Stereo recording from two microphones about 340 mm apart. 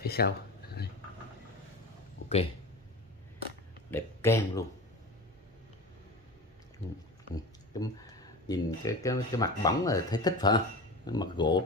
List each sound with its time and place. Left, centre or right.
0.0 s speech: left
3.9 s a man's voice: centre
7.3 s a sound: centre
8.5 s speech: centre